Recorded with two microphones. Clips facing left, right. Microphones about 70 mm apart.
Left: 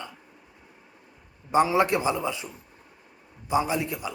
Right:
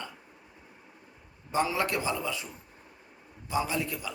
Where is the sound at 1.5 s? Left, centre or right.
Left.